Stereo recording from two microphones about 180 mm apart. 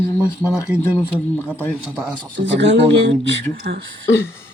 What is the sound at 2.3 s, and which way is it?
Speech, 85° right.